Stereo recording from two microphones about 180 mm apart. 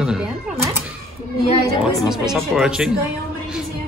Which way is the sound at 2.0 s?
Centre (ahead or behind).